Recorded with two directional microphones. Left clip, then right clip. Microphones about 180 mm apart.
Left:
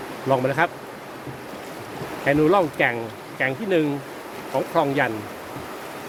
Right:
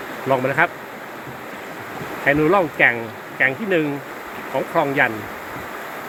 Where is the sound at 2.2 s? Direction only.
5° left (ahead or behind).